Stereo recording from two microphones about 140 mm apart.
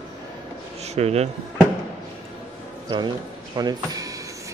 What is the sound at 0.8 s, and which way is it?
Speech, 50° right (ahead or behind).